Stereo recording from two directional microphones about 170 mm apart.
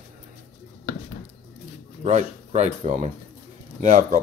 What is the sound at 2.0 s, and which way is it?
Speech, 40° right (ahead or behind).